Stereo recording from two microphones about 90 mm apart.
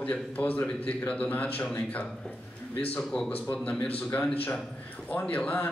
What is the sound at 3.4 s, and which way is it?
Speech, 20° left (ahead or behind).